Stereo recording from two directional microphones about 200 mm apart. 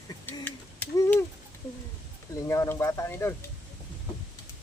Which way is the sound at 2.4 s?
15° left (ahead or behind).